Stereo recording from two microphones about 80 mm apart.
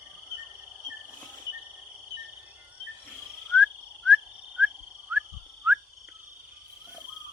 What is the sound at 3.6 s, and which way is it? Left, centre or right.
Whistle, centre.